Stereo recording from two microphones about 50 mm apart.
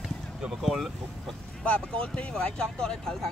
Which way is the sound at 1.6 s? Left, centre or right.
Left.